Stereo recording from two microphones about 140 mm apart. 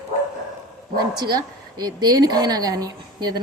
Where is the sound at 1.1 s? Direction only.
30° right (ahead or behind).